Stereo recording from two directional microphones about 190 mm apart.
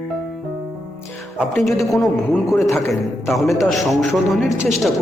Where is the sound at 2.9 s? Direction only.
Centre (ahead or behind).